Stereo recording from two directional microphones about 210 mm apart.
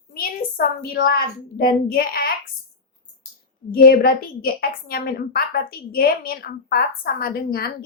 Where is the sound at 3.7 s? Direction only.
45° left (ahead or behind).